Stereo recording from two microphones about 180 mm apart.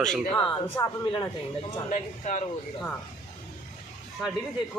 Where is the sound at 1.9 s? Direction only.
40° left (ahead or behind).